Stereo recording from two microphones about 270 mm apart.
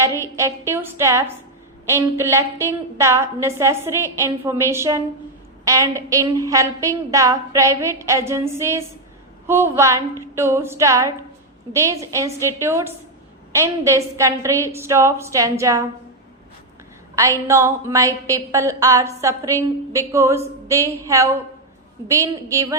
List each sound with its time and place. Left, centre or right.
0.2 s a woman's voice: centre
17.2 s a woman's voice: centre